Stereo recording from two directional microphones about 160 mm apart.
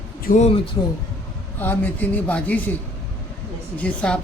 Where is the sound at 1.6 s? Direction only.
10° left (ahead or behind).